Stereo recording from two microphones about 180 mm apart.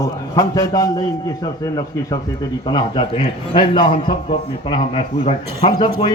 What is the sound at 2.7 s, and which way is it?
A man's voice, 30° left (ahead or behind).